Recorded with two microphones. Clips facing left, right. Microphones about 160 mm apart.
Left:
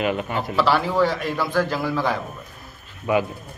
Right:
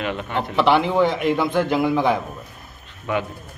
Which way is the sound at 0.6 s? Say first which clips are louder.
Right 2 dB; 20° right (ahead or behind).